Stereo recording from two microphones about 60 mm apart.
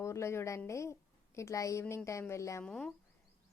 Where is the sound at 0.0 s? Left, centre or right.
Left.